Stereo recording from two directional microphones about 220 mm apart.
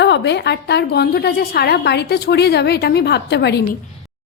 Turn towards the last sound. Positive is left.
turn(degrees=50)  # may be behind; listen again after turning